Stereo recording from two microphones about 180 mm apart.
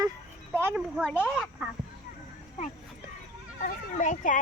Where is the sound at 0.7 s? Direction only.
5° left (ahead or behind).